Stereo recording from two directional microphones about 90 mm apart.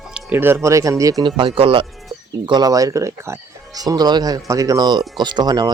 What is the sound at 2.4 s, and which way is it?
Speech, 50° right (ahead or behind).